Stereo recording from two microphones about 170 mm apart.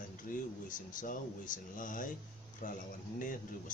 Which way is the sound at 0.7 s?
50° left (ahead or behind).